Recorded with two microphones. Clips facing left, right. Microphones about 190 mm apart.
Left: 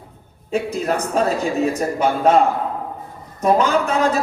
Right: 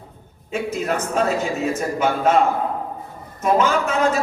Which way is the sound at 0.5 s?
35° left (ahead or behind).